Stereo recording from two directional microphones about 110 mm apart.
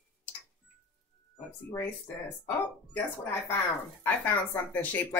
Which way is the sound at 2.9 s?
15° left (ahead or behind).